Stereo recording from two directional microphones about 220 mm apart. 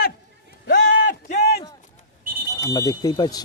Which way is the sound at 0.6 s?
45° left (ahead or behind).